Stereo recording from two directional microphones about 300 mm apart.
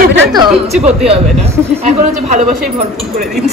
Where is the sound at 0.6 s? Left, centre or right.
Right.